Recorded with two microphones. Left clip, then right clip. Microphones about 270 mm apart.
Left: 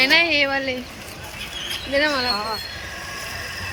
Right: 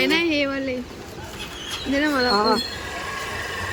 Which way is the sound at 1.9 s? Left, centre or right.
Centre.